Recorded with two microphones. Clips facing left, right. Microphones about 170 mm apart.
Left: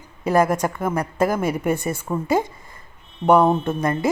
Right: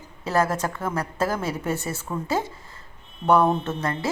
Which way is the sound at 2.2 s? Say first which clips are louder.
Left 6 dB; 15° left (ahead or behind).